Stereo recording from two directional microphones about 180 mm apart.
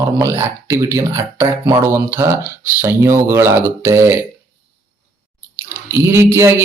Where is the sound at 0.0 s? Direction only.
15° right (ahead or behind).